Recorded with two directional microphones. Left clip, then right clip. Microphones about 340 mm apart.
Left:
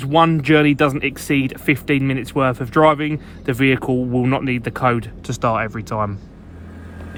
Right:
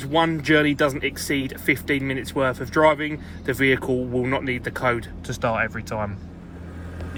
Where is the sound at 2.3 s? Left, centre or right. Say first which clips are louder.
Left 4 dB; left.